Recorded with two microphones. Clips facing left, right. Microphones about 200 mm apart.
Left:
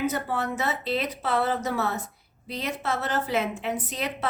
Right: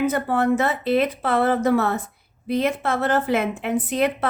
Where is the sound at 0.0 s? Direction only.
55° right (ahead or behind).